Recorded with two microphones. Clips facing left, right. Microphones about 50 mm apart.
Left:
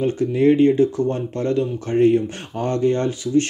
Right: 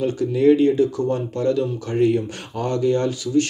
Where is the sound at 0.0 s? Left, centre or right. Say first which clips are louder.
Even; left.